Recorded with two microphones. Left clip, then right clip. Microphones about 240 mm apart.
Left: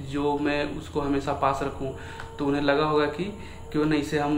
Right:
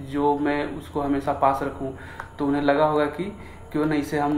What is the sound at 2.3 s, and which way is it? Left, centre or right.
Speech, centre.